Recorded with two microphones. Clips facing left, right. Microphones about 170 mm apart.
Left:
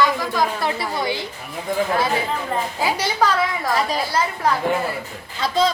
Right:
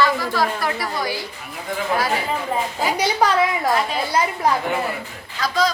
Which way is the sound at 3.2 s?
15° right (ahead or behind).